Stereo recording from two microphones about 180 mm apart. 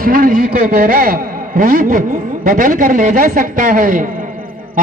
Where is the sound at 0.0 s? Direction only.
50° right (ahead or behind).